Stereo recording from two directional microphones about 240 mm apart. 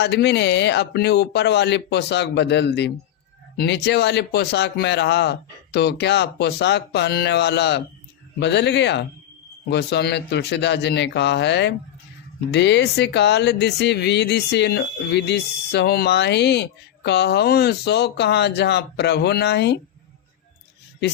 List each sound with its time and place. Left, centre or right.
0.0 s speech: left